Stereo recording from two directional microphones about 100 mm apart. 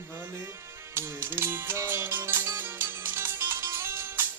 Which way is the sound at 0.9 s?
25° right (ahead or behind).